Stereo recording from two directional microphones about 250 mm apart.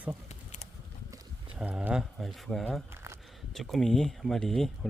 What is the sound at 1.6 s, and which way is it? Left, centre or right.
Speech, centre.